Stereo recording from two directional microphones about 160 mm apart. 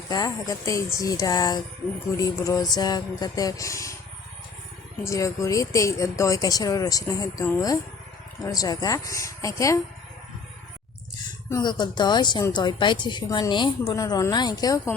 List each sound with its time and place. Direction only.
0.1 s a woman's voice: 20° left (ahead or behind)
5.0 s a woman's voice: 20° left (ahead or behind)
8.4 s a woman's voice: 20° left (ahead or behind)
11.4 s a woman's voice: 25° left (ahead or behind)